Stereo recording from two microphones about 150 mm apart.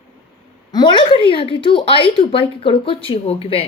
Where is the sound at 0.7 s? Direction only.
30° left (ahead or behind).